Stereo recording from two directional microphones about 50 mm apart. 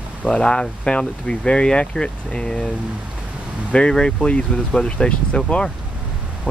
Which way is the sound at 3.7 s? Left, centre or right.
Centre.